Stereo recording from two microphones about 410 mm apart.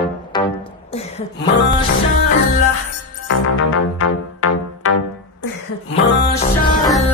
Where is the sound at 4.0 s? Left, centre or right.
Left.